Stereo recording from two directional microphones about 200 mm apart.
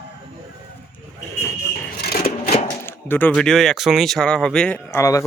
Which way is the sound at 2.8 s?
10° left (ahead or behind).